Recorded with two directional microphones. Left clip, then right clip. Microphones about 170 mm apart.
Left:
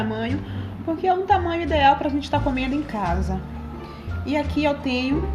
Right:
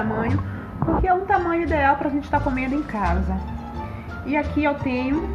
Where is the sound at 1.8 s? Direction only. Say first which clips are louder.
Left 6 dB; 40° left (ahead or behind).